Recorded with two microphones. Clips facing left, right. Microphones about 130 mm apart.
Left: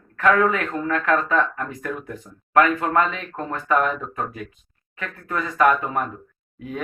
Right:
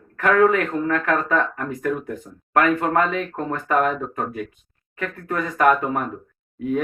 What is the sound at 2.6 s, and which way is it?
Speech, 50° right (ahead or behind).